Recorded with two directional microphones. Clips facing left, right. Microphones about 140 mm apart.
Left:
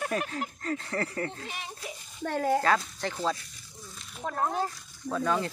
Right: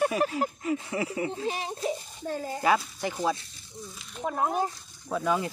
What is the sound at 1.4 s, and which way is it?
Speech, 35° right (ahead or behind).